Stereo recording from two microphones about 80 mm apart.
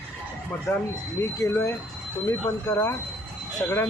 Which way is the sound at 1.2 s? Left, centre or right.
Left.